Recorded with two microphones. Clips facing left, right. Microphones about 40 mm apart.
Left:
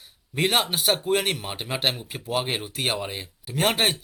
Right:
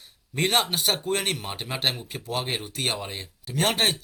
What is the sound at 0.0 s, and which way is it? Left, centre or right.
Speech, centre.